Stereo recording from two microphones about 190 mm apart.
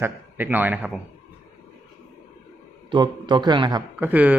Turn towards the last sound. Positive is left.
turn(degrees=-10)  # may be behind; listen again after turning